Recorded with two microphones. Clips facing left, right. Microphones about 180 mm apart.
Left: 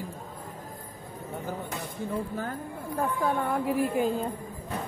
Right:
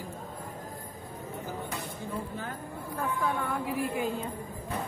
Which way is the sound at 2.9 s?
40° left (ahead or behind).